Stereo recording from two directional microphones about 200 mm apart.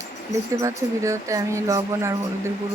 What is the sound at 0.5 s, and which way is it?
Speech, 15° right (ahead or behind).